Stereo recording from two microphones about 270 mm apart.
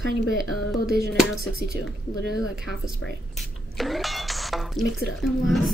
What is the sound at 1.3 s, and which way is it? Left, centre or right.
Speech, right.